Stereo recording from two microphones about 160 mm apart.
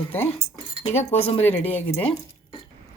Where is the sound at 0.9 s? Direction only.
40° left (ahead or behind).